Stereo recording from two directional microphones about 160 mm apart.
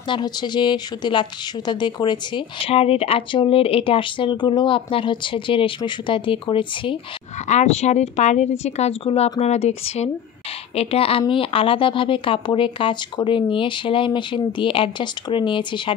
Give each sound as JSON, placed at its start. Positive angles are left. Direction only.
{"t": 0.1, "sound": "speech", "side_deg": 25}
{"t": 7.4, "sound": "speech", "side_deg": 45}